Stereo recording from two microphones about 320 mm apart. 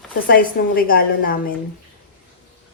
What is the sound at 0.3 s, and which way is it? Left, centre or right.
A woman's voice, left.